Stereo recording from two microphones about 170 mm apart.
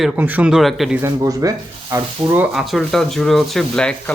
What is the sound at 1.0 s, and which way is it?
Speech, 20° right (ahead or behind).